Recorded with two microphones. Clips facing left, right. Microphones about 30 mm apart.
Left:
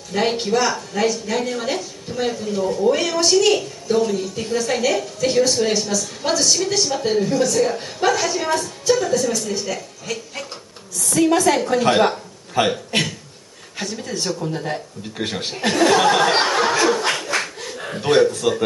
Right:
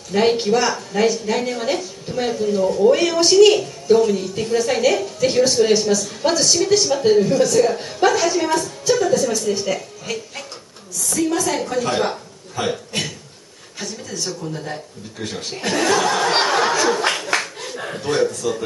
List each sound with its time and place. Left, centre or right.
0.1 s a woman's voice: centre
11.1 s a man's voice: left
14.0 s speech: left
14.4 s speech: left
15.3 s speech: left
16.3 s a sound: centre
18.4 s speech: left